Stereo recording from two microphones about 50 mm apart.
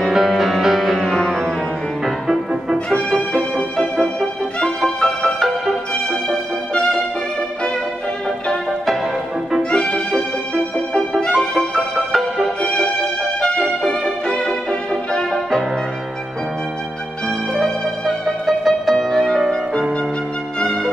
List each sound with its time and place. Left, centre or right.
0.0 s music: centre
2.0 s music: centre
2.9 s music: centre
5.0 s music: centre
6.7 s music: left
9.6 s music: centre
11.7 s music: centre
13.6 s music: centre
18.2 s music: centre